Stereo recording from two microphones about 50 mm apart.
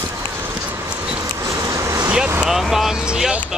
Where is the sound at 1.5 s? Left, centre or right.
Right.